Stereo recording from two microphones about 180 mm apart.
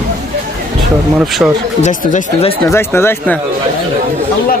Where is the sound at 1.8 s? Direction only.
45° left (ahead or behind).